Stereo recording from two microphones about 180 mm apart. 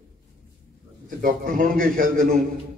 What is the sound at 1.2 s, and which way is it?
A man's voice, 50° right (ahead or behind).